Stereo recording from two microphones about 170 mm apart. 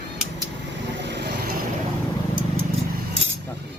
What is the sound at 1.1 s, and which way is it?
Vehicle, 80° right.